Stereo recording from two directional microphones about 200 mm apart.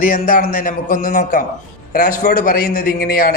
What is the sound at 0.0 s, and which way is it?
A man's voice, 45° left (ahead or behind).